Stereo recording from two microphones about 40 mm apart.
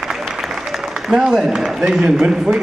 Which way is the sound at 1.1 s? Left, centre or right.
Centre.